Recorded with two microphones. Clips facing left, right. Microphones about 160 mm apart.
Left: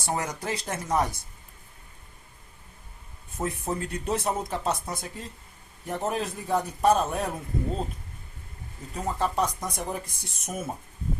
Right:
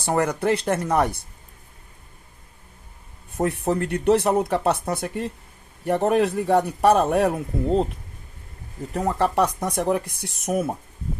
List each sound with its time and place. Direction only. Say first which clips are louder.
0.0 s speech: right 9 dB; 60° right (ahead or behind)
3.3 s speech: right 8 dB; 65° right (ahead or behind)
8.9 s speech: right 6 dB; 70° right (ahead or behind)